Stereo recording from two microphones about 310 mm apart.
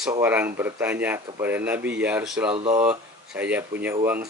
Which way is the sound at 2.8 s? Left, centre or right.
Centre.